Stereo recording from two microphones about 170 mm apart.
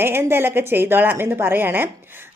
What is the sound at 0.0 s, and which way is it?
A woman's voice, 15° right (ahead or behind).